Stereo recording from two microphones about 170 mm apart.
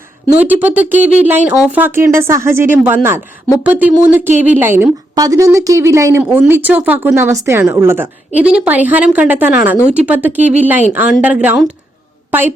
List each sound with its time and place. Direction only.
0.3 s a woman's voice: 10° right (ahead or behind)